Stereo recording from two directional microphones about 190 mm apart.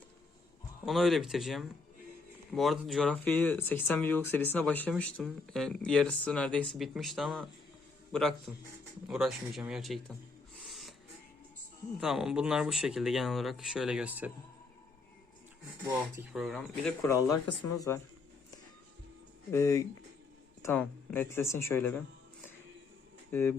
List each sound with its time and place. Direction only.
0.9 s speech: centre (ahead or behind)
10.6 s a sound: centre (ahead or behind)
11.9 s speech: centre (ahead or behind)
16.3 s speech: centre (ahead or behind)
17.1 s speech: 15° left (ahead or behind)
19.5 s speech: 15° left (ahead or behind)
23.3 s speech: 10° left (ahead or behind)